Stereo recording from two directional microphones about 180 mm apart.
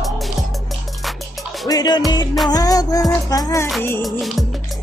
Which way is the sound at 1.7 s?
20° left (ahead or behind).